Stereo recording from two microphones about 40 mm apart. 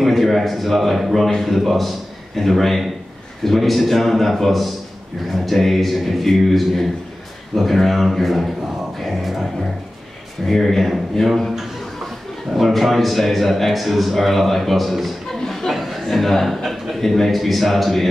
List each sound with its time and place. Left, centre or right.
0.0 s a man's voice: centre
8.9 s music: centre
10.4 s a man's voice: centre
15.4 s a sound: centre
15.7 s chuckle: centre
17.0 s a man's voice: centre